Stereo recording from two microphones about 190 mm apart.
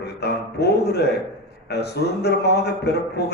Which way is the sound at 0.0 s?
60° left (ahead or behind).